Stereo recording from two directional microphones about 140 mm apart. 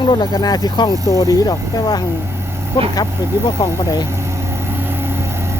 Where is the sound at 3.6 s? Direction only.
30° left (ahead or behind).